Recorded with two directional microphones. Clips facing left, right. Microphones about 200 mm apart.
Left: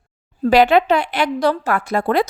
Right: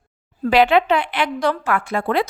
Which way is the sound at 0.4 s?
40° left (ahead or behind).